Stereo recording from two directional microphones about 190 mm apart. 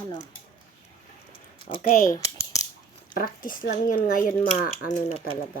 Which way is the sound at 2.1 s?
15° left (ahead or behind).